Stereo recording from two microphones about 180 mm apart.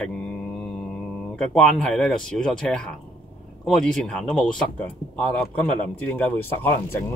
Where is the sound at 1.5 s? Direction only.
5° left (ahead or behind).